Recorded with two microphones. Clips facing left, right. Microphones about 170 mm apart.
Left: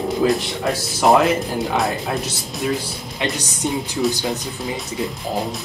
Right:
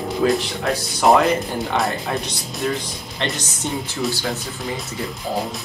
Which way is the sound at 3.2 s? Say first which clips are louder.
Left 2 dB; 15° left (ahead or behind).